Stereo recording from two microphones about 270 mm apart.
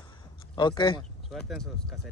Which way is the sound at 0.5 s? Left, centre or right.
Centre.